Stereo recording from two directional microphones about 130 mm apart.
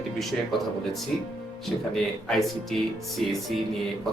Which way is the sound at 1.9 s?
Centre (ahead or behind).